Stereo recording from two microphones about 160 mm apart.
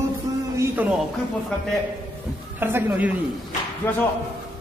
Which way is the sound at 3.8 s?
15° left (ahead or behind).